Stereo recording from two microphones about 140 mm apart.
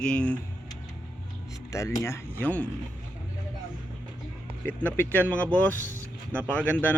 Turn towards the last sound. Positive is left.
turn(degrees=10)  # may be behind; listen again after turning